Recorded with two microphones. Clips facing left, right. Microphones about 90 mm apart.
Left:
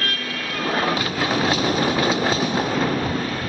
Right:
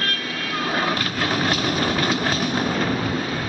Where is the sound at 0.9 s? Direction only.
5° left (ahead or behind).